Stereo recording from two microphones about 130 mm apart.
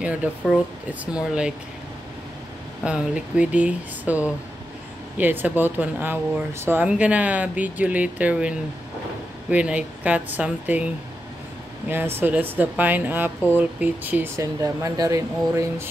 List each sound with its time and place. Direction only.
0.0 s speech: 10° right (ahead or behind)
2.8 s speech: 10° right (ahead or behind)
11.9 s speech: 15° right (ahead or behind)